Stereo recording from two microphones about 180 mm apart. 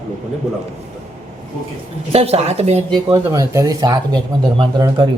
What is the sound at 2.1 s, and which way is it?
Speech, 35° right (ahead or behind).